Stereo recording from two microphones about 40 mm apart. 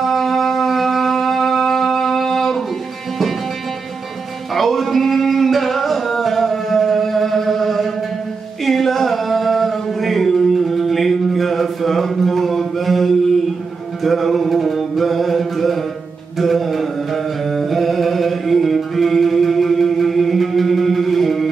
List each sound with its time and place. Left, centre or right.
0.0 s wind instrument: centre
4.6 s singing: centre
14.0 s mantra: centre
16.3 s chant: centre